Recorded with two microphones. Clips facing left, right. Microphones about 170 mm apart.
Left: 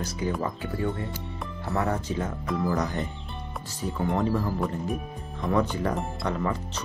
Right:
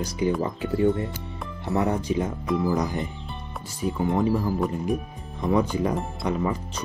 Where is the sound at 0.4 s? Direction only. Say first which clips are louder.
Right 6 dB; 20° right (ahead or behind).